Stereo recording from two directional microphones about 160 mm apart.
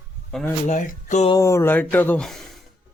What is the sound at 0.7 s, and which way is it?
Speech, 45° left (ahead or behind).